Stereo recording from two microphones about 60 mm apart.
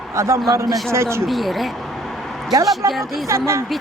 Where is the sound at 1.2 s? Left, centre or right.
Centre.